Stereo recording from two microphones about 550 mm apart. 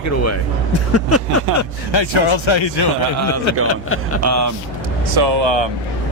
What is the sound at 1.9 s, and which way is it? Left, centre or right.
Speech, left.